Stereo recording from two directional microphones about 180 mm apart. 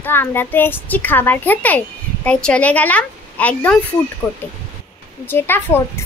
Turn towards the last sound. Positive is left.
turn(degrees=10)  # may be behind; listen again after turning